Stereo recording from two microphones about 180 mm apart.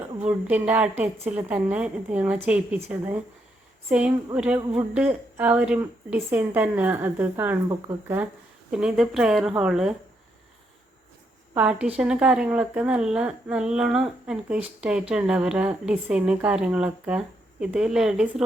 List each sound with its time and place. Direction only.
0.3 s a woman's voice: 5° right (ahead or behind)
11.5 s speech: 5° right (ahead or behind)